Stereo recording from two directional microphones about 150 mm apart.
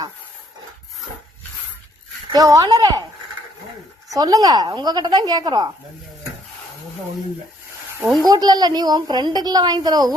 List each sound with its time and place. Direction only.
2.3 s a woman's voice: 25° right (ahead or behind)
4.1 s a woman's voice: 25° right (ahead or behind)
8.2 s a woman's voice: 25° right (ahead or behind)